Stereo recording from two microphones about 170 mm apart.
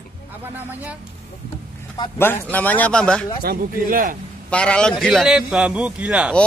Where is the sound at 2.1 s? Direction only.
15° left (ahead or behind).